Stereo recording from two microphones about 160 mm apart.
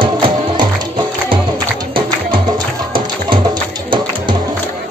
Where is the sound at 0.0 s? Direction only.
30° right (ahead or behind).